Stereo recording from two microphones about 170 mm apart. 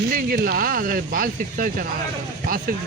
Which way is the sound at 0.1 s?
60° right (ahead or behind).